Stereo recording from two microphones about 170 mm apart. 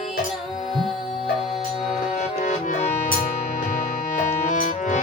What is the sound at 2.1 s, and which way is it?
Music, 50° left (ahead or behind).